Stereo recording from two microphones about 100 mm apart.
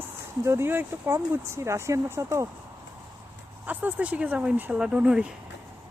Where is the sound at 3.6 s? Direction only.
15° right (ahead or behind).